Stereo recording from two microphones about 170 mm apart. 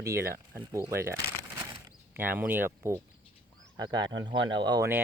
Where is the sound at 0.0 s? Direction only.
15° right (ahead or behind).